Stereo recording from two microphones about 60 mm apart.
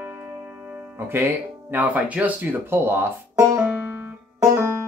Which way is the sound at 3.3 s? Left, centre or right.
Right.